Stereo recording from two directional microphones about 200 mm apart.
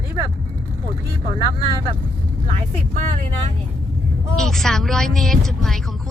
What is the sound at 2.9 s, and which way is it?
Speech, 35° right (ahead or behind).